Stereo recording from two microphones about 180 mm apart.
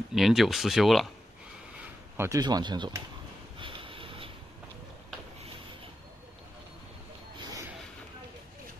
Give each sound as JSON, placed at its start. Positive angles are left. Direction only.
{"t": 0.1, "sound": "speech", "side_deg": 0}
{"t": 2.1, "sound": "speech", "side_deg": -15}
{"t": 3.5, "sound": "vehicle", "side_deg": -30}
{"t": 7.3, "sound": "a sound", "side_deg": -20}